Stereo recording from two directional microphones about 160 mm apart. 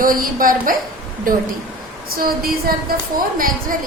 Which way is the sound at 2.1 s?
65° right (ahead or behind).